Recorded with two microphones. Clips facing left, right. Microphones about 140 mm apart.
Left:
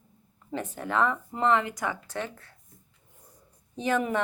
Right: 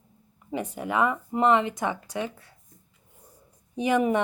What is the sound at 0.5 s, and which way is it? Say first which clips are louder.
Speech: right 2 dB; 10° right (ahead or behind).